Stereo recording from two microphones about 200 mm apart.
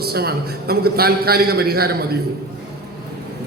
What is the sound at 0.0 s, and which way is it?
A man's voice, 50° right (ahead or behind).